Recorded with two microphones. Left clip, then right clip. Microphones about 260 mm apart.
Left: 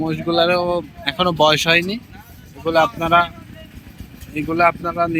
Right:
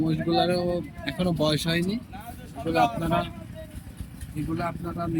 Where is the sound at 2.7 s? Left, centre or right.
Centre.